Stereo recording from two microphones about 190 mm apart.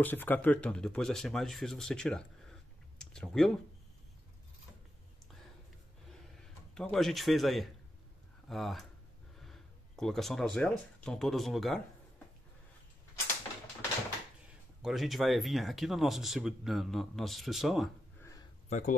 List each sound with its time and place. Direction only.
0.0 s speech: 10° left (ahead or behind)
6.7 s speech: 5° left (ahead or behind)
14.8 s speech: centre (ahead or behind)
18.7 s speech: 40° left (ahead or behind)